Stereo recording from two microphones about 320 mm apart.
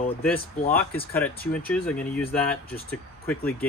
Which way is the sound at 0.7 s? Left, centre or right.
Left.